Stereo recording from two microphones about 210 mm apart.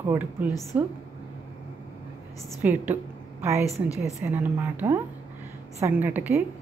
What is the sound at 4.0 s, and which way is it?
Speech, 15° right (ahead or behind).